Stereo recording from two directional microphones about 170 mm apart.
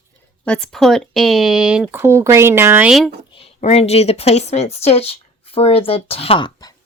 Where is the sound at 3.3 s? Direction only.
35° left (ahead or behind).